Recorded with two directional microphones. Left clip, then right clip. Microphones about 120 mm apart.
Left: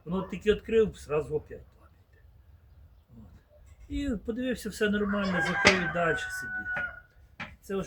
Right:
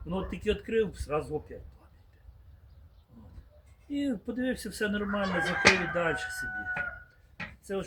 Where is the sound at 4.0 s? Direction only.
25° left (ahead or behind).